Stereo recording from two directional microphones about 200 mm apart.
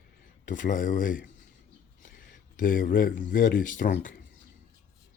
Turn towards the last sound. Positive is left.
turn(degrees=45)  # may be behind; listen again after turning